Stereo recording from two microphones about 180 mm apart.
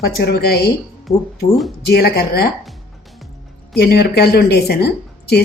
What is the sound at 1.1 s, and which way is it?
Speech, 35° left (ahead or behind).